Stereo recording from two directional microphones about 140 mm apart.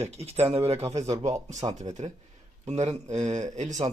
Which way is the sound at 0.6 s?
45° right (ahead or behind).